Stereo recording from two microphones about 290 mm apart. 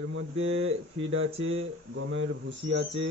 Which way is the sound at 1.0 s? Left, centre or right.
Right.